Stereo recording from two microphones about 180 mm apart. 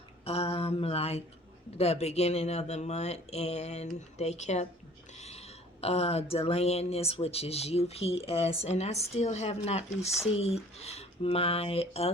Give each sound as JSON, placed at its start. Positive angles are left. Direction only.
{"t": 0.3, "sound": "mantra", "side_deg": 35}
{"t": 1.8, "sound": "speech", "side_deg": 35}